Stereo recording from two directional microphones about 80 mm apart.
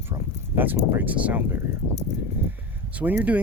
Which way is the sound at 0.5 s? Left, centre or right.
Right.